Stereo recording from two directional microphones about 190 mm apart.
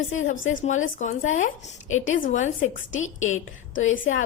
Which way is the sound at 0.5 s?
40° left (ahead or behind).